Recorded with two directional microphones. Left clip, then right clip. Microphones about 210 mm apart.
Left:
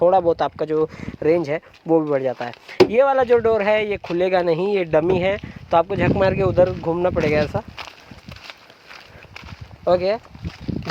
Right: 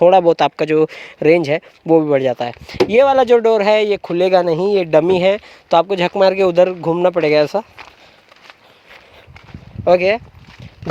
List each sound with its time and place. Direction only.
0.0 s speech: 50° right (ahead or behind)
9.8 s speech: 45° right (ahead or behind)